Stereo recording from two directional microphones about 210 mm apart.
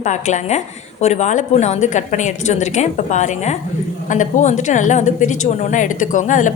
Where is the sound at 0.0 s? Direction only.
35° left (ahead or behind).